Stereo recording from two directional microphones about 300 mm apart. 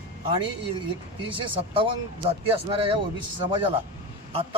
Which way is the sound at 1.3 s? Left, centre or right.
Centre.